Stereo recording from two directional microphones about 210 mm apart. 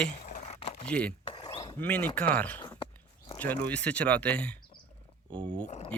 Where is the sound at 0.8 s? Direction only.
5° left (ahead or behind).